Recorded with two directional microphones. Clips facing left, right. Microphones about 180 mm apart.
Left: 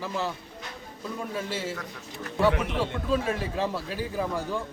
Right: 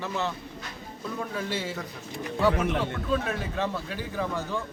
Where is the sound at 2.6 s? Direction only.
50° right (ahead or behind).